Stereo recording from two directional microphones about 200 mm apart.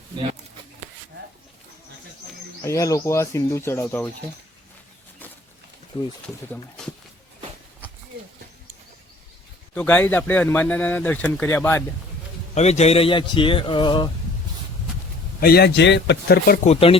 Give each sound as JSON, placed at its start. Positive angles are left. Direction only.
{"t": 2.6, "sound": "speech", "side_deg": 15}
{"t": 6.2, "sound": "speech", "side_deg": 5}
{"t": 9.7, "sound": "speech", "side_deg": 10}
{"t": 12.5, "sound": "speech", "side_deg": 35}
{"t": 15.4, "sound": "a man's voice", "side_deg": 50}
{"t": 16.6, "sound": "speech", "side_deg": 30}